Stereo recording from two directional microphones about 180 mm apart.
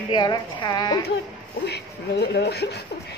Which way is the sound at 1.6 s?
70° left (ahead or behind).